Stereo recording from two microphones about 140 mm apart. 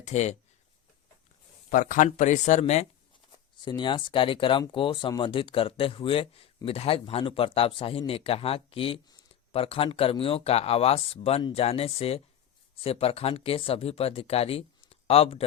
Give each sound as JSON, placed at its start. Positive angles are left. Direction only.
{"t": 0.0, "sound": "speech", "side_deg": 55}
{"t": 1.7, "sound": "speech", "side_deg": 70}
{"t": 2.1, "sound": "speech", "side_deg": 60}
{"t": 3.6, "sound": "speech", "side_deg": 35}